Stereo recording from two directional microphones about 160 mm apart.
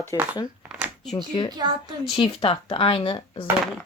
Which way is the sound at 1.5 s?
25° right (ahead or behind).